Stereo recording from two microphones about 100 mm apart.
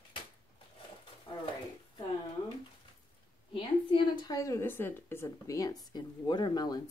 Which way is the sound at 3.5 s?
55° left (ahead or behind).